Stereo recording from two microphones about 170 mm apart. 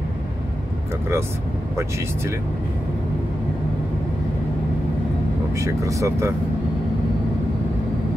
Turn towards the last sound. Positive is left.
turn(degrees=-15)  # may be behind; listen again after turning